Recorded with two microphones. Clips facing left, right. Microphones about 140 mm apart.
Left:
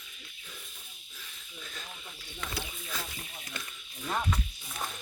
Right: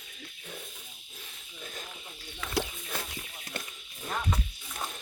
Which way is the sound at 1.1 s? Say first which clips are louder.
Left 1 dB; 45° right (ahead or behind).